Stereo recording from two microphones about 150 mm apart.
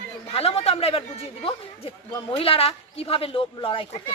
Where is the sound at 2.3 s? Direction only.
40° left (ahead or behind).